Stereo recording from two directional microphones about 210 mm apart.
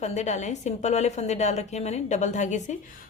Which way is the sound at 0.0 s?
30° left (ahead or behind).